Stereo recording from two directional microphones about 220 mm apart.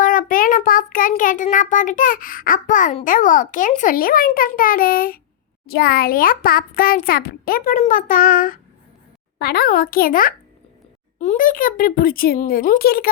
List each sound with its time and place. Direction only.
0.0 s child singing: 40° left (ahead or behind)